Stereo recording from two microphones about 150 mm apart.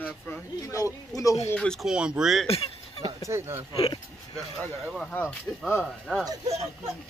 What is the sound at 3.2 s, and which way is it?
Speech, 15° right (ahead or behind).